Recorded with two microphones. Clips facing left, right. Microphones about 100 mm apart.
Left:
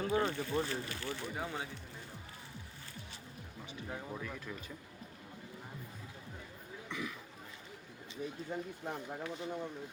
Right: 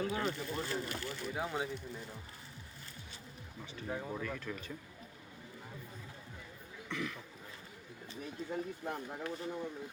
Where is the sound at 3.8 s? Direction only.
10° right (ahead or behind).